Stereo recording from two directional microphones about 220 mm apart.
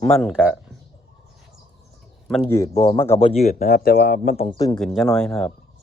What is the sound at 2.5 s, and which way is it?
Speech, 15° left (ahead or behind).